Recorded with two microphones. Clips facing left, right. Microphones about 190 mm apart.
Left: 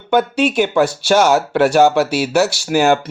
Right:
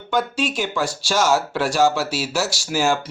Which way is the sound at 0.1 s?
60° left (ahead or behind).